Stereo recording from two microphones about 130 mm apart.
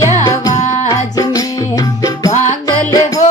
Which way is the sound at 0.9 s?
30° left (ahead or behind).